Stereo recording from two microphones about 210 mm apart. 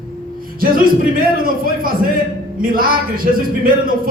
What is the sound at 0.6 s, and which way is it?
Speech, 40° right (ahead or behind).